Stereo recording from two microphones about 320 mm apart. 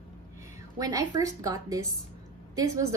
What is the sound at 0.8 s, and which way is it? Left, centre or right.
Speech, centre.